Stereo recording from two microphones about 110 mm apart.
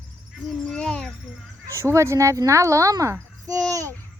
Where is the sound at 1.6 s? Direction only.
25° right (ahead or behind).